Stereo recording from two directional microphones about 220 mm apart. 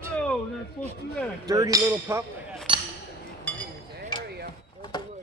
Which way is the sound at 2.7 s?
20° right (ahead or behind).